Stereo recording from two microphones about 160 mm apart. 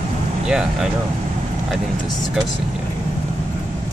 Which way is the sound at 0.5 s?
5° right (ahead or behind).